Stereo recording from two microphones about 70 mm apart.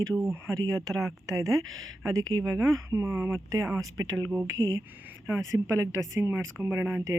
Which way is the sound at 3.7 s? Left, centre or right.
Right.